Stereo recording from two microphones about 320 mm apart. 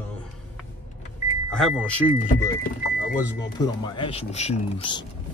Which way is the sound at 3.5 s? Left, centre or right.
Centre.